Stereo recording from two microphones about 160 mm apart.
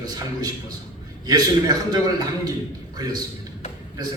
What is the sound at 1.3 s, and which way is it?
A man's voice, 25° right (ahead or behind).